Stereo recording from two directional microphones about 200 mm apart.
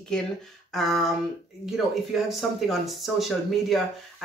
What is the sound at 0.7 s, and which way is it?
Speech, centre (ahead or behind).